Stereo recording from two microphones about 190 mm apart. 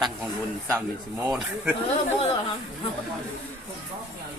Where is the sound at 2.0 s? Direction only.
30° left (ahead or behind).